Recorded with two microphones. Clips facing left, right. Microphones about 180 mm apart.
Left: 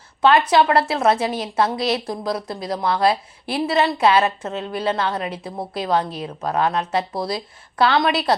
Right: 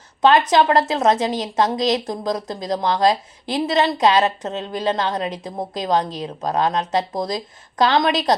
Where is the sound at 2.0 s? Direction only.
40° right (ahead or behind).